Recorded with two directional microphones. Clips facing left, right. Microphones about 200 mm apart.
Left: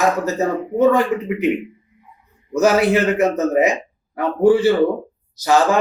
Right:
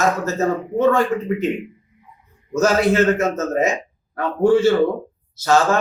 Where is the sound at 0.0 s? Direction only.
15° left (ahead or behind).